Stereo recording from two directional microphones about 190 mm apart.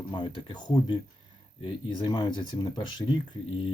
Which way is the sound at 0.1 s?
25° left (ahead or behind).